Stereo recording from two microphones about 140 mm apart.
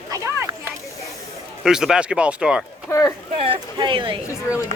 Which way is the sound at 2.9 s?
20° left (ahead or behind).